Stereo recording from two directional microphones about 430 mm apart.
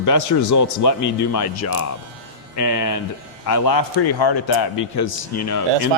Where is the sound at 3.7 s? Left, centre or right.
Left.